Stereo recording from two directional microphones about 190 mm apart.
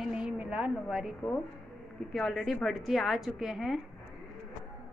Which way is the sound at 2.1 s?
Centre (ahead or behind).